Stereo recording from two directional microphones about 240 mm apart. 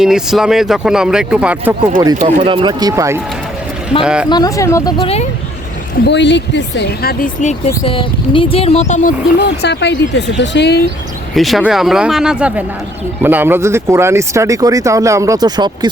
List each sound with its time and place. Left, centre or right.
0.0 s speech: centre
2.1 s speech: right; by 4.3 s centre
4.3 s speech: centre
6.1 s speech: left
7.7 s speech: left
9.6 s speech: left
11.3 s speech: centre